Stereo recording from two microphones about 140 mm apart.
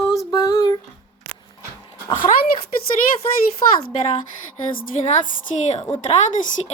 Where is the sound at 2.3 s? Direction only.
60° left (ahead or behind).